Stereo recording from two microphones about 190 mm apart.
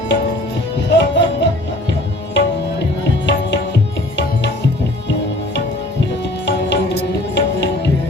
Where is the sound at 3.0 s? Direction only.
70° left (ahead or behind).